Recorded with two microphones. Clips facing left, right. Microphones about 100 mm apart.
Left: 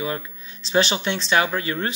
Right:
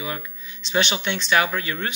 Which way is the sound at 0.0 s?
35° left (ahead or behind).